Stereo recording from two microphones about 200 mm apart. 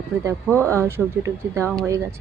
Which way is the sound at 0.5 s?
10° left (ahead or behind).